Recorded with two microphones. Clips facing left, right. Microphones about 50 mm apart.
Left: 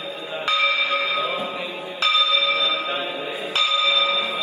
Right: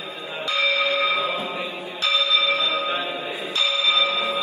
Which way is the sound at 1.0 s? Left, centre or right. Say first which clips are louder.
Right 1 dB; right.